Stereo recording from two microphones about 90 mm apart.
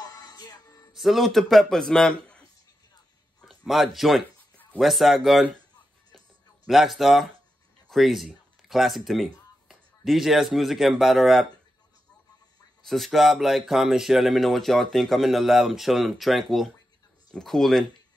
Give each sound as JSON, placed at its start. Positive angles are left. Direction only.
{"t": 0.0, "sound": "music", "side_deg": 45}
{"t": 0.9, "sound": "speech", "side_deg": 0}
{"t": 3.3, "sound": "a sound", "side_deg": 0}
{"t": 4.7, "sound": "speech", "side_deg": 0}
{"t": 6.1, "sound": "a sound", "side_deg": 0}
{"t": 7.9, "sound": "speech", "side_deg": 0}
{"t": 12.8, "sound": "speech", "side_deg": 0}